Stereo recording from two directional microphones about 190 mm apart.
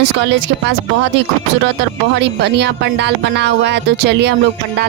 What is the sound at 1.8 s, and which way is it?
Speech, 60° right (ahead or behind).